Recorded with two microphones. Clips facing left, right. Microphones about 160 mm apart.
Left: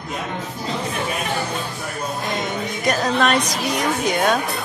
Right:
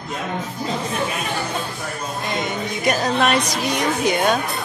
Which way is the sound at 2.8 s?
5° right (ahead or behind).